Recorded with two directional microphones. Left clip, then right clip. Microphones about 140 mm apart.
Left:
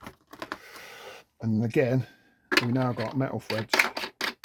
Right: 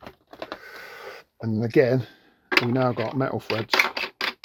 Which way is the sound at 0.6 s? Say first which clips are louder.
Right 5 dB; centre (ahead or behind).